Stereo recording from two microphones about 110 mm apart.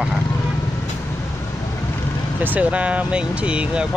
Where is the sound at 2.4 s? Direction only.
15° right (ahead or behind).